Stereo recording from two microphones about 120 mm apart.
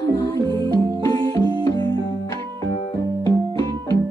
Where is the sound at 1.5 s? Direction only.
35° left (ahead or behind).